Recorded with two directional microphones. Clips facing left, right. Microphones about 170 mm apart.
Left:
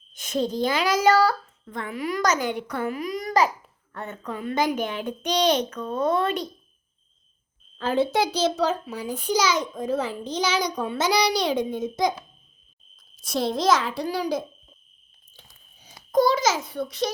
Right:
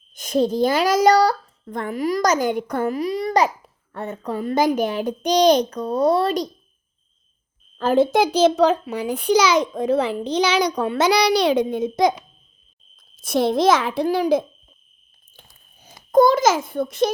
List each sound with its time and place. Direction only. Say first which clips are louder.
0.2 s a child's voice: right 6 dB; 45° right (ahead or behind)
7.8 s a child's voice: right 6 dB; 45° right (ahead or behind); by 12.1 s 70° right (ahead or behind)
13.1 s a child's voice: right 6 dB; 55° right (ahead or behind)
15.3 s a sound: right 2 dB; 55° right (ahead or behind)
16.1 s a child's voice: right 6 dB; 50° right (ahead or behind)